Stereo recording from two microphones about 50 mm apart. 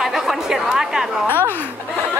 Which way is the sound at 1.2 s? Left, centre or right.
Left.